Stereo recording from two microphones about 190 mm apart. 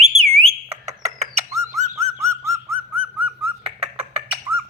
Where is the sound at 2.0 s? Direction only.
15° right (ahead or behind).